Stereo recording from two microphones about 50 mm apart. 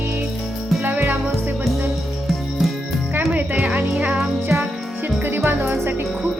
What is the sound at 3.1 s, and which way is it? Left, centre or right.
Music, right.